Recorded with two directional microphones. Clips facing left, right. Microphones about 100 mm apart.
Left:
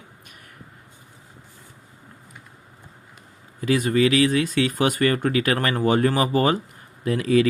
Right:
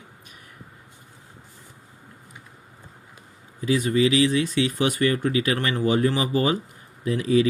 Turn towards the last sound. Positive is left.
turn(degrees=55)  # may be behind; listen again after turning